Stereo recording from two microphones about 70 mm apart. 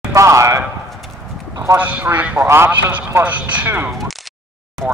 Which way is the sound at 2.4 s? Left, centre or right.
Right.